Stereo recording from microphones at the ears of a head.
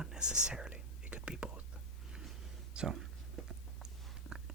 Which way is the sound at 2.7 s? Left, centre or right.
Right.